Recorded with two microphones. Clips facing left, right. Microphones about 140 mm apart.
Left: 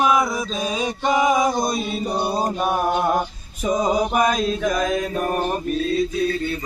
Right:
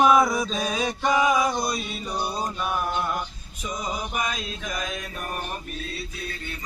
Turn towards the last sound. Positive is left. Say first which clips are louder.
# left 11 dB
turn(degrees=40)  # may be behind; listen again after turning